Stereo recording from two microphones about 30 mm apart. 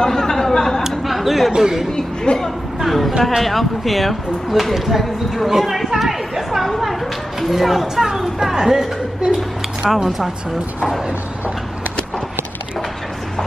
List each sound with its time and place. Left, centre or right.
0.0 s chatter: centre
1.0 s a sound: centre
1.6 s speech: centre
2.3 s speech: left
2.9 s speech: centre
6.6 s a sound: centre
7.3 s speech: centre
8.6 s a sound: centre
10.0 s speech: centre